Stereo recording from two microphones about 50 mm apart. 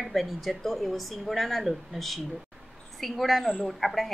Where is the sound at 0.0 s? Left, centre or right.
Centre.